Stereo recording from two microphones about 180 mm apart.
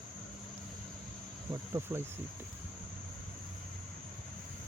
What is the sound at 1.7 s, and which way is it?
Cricket, 15° right (ahead or behind).